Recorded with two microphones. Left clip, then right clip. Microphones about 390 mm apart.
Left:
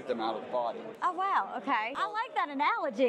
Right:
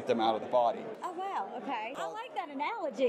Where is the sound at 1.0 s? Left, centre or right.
Left.